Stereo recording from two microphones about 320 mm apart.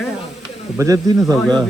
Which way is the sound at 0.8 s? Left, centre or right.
Centre.